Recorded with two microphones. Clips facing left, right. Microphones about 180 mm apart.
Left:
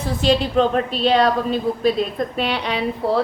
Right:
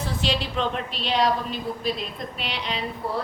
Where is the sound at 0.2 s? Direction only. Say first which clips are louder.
Left 11 dB; 45° left (ahead or behind).